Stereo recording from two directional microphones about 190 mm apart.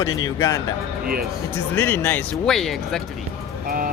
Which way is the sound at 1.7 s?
10° left (ahead or behind).